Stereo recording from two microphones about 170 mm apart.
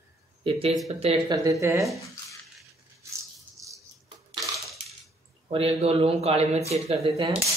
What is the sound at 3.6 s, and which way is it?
Cutlery, 20° right (ahead or behind).